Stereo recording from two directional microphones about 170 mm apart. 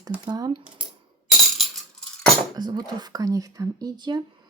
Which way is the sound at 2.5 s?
25° right (ahead or behind).